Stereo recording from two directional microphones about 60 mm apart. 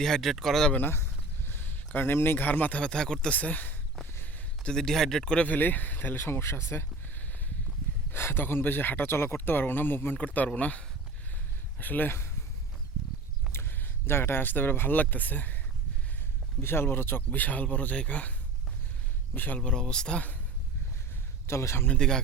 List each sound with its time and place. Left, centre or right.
0.0 s speech: centre
0.9 s a sound: left
2.8 s speech: centre
3.3 s speech: left
4.6 s speech: centre
5.5 s speech: left
8.1 s speech: left
10.2 s speech: left
11.8 s speech: left
13.5 s speech: left
16.6 s a man's voice: left
19.5 s speech: centre
21.4 s a man's voice: left
21.8 s speech: centre